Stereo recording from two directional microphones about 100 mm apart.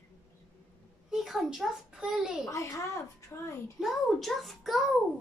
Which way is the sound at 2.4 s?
30° left (ahead or behind).